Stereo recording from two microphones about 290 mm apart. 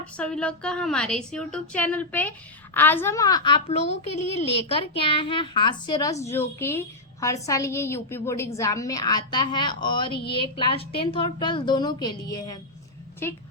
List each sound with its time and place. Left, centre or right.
0.0 s a woman's voice: centre
10.1 s a woman's voice: left
10.6 s a woman's voice: centre